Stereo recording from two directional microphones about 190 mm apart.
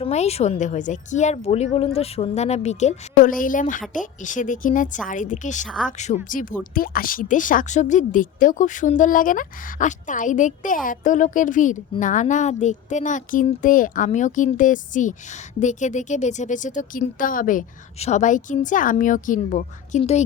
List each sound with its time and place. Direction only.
0.0 s a woman's voice: 35° left (ahead or behind)
5.6 s speech: centre (ahead or behind)
6.2 s a woman's voice: 45° left (ahead or behind)